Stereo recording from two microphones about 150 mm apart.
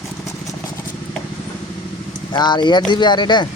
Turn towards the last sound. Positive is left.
turn(degrees=30)  # may be behind; listen again after turning